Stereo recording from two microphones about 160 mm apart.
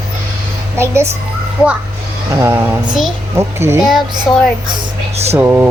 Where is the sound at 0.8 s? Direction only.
15° right (ahead or behind).